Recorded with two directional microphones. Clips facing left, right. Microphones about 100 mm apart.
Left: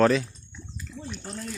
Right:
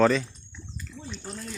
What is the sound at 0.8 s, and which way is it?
Bathtub, 5° left (ahead or behind).